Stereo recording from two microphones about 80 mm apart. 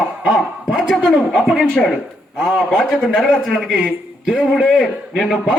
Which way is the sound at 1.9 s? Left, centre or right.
Centre.